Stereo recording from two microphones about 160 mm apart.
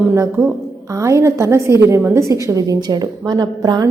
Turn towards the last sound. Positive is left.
turn(degrees=-25)  # may be behind; listen again after turning